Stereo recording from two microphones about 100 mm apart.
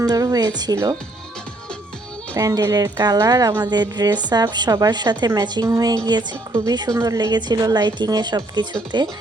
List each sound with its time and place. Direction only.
0.0 s speech: 40° right (ahead or behind)
2.3 s a woman's voice: 35° right (ahead or behind)